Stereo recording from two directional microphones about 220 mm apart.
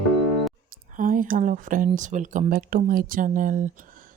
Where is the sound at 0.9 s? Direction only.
40° right (ahead or behind).